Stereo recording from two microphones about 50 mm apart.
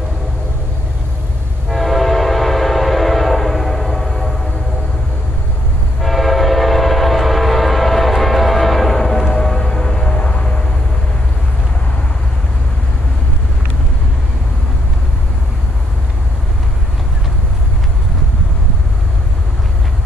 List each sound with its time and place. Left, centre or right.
1.7 s train: centre
5.9 s train: centre
9.3 s music: centre
10.1 s vehicle: left